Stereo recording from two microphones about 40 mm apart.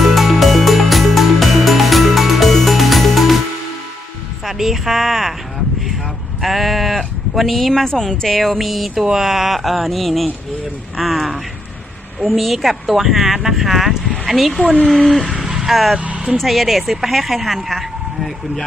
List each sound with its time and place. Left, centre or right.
0.0 s music: centre
4.5 s speech: centre
6.4 s speech: centre
7.9 s speech: centre
8.4 s speech: centre
8.9 s speech: centre
15.4 s vehicle: centre
15.7 s speech: centre